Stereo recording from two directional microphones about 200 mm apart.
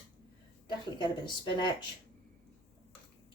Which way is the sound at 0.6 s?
25° left (ahead or behind).